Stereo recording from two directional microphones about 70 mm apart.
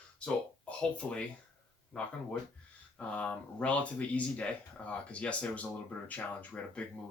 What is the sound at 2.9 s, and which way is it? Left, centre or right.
Speech, centre.